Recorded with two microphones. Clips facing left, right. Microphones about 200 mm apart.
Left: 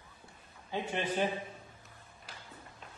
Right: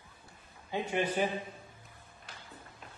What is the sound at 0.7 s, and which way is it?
Speech, 15° right (ahead or behind).